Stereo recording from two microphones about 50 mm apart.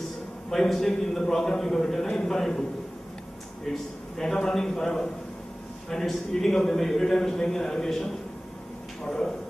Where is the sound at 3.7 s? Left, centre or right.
Centre.